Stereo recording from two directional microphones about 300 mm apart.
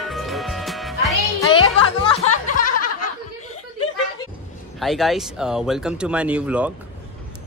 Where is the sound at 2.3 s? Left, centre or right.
Left.